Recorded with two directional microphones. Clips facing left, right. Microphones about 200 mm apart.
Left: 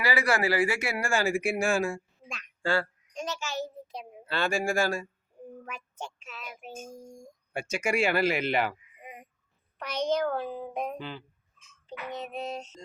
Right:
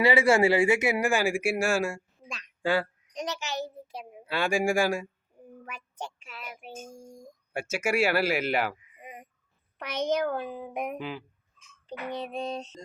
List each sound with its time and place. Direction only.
0.0 s a child's voice: 25° right (ahead or behind)
5.6 s child singing: 10° right (ahead or behind)
7.5 s speech: 5° right (ahead or behind)
9.7 s speech: 15° right (ahead or behind)
11.9 s a sound: 35° right (ahead or behind)